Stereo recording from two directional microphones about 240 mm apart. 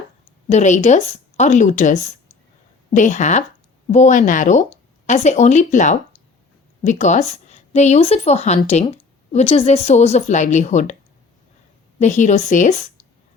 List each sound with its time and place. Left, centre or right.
0.4 s speech: left
11.9 s speech: left